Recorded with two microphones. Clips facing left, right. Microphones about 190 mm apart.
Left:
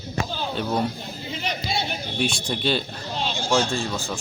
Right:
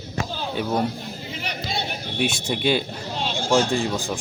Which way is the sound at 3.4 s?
50° right (ahead or behind).